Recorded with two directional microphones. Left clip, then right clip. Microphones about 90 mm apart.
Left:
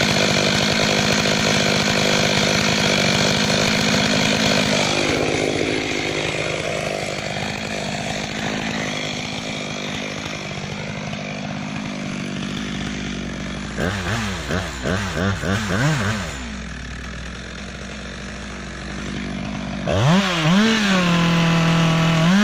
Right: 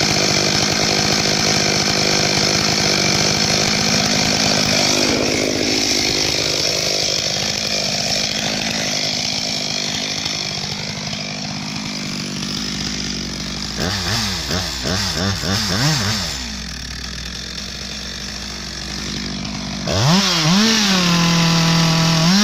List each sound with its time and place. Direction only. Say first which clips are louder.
0.0 s chainsaw: right 1 dB; 75° right (ahead or behind)
6.8 s chainsaw: right 5 dB; 65° right (ahead or behind); by 8.3 s 50° right (ahead or behind)
8.3 s chainsaw: right 4 dB; 35° right (ahead or behind)
9.3 s chainsaw: right 6 dB; 15° right (ahead or behind)
13.7 s chainsaw: right 3 dB; 10° right (ahead or behind)
19.9 s chainsaw: right 2 dB; 5° right (ahead or behind)